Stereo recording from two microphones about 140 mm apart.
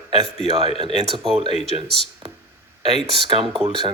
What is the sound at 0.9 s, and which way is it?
Speech, 45° right (ahead or behind).